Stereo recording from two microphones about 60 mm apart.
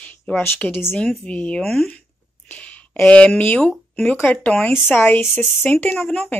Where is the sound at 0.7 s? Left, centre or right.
Left.